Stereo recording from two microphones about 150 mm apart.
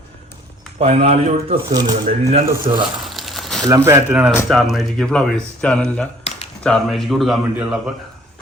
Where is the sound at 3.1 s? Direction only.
Centre (ahead or behind).